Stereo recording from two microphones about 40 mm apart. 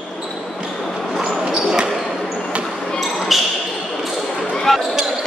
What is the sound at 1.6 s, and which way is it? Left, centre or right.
Basketball bounce, centre.